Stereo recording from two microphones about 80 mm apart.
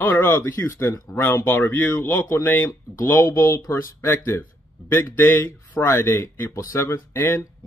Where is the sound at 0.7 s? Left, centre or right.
Left.